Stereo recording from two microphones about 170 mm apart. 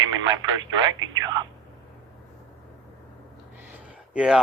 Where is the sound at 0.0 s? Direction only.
25° right (ahead or behind).